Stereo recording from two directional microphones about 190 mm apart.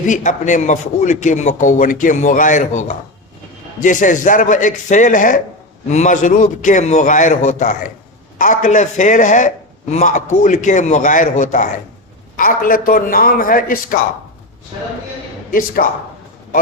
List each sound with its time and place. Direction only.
0.0 s a man's voice: 40° left (ahead or behind)
15.5 s a man's voice: 50° left (ahead or behind)